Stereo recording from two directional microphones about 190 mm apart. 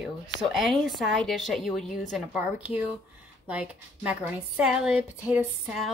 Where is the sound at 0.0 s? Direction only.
Centre (ahead or behind).